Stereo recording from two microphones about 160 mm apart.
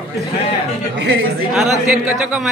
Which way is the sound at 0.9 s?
90° right.